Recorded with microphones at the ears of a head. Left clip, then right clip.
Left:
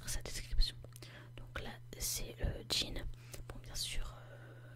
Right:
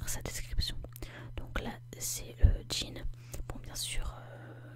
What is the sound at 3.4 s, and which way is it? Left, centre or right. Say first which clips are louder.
Whispering: right 3 dB; right.